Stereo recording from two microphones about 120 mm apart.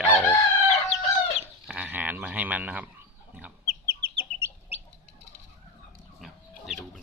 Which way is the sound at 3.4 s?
15° right (ahead or behind).